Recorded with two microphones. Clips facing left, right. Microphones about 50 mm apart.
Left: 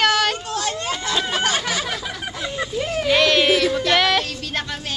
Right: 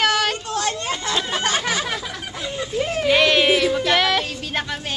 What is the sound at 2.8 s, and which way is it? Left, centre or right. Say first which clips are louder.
Music: right 1 dB; centre.